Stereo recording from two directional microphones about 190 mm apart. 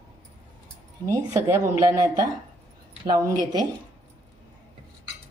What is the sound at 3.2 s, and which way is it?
Speech, 20° right (ahead or behind).